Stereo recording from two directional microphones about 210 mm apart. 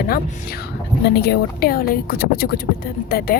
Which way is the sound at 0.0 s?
45° left (ahead or behind).